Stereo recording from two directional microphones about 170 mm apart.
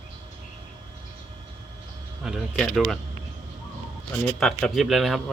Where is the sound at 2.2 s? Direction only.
Centre (ahead or behind).